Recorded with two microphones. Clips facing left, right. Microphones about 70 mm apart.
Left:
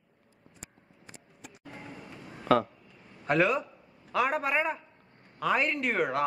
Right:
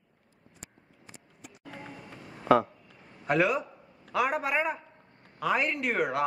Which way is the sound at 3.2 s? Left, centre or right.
Centre.